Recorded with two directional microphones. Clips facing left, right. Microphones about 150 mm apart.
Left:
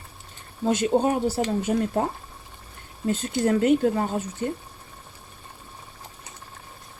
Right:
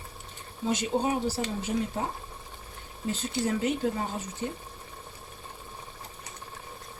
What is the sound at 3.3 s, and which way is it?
Speech, 55° left (ahead or behind).